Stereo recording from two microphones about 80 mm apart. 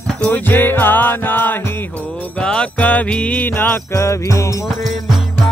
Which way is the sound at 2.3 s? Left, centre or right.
Centre.